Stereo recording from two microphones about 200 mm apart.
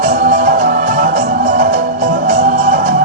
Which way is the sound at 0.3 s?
45° right (ahead or behind).